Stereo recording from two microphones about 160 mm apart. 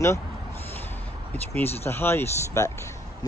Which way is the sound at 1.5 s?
15° left (ahead or behind).